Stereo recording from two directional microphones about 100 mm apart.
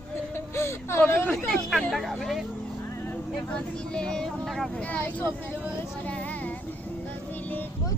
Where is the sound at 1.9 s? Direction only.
Centre (ahead or behind).